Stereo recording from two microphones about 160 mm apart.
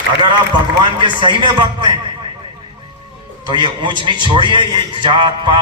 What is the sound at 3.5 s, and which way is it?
A man's voice, 30° right (ahead or behind).